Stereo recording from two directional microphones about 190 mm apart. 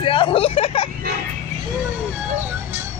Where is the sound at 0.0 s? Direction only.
25° left (ahead or behind).